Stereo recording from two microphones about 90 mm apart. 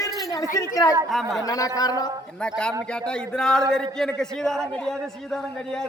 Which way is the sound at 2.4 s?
10° left (ahead or behind).